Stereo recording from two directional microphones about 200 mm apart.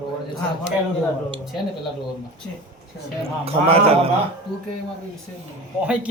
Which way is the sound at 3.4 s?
30° right (ahead or behind).